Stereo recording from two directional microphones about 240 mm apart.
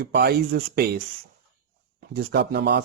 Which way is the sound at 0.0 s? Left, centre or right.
Right.